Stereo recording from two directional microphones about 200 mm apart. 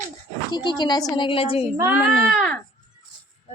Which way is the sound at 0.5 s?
20° left (ahead or behind).